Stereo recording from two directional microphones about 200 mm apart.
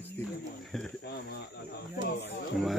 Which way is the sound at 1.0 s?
55° left (ahead or behind).